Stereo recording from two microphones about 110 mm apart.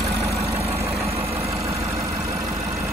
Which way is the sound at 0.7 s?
25° right (ahead or behind).